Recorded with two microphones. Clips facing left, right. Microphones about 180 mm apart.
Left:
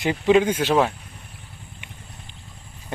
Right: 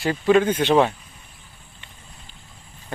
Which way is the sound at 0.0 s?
20° left (ahead or behind).